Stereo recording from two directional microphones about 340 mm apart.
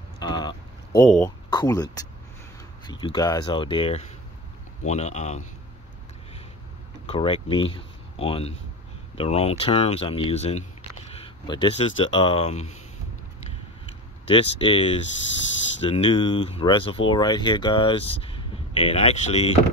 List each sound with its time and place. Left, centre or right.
0.2 s a sound: centre
1.5 s speech: centre
7.1 s speech: centre
14.3 s speech: centre